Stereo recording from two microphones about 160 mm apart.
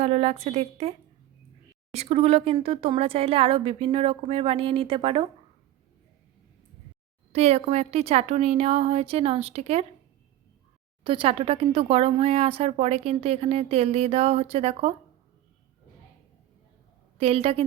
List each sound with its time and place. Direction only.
0.0 s speech: 40° right (ahead or behind)
7.3 s speech: 40° right (ahead or behind)
11.0 s speech: 35° right (ahead or behind)
17.2 s speech: 35° right (ahead or behind)